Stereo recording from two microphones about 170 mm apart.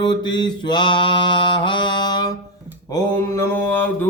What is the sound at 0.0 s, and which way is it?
Mantra, 25° left (ahead or behind).